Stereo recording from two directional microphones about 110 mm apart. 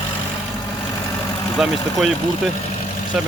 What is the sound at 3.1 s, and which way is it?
Speech, 5° right (ahead or behind).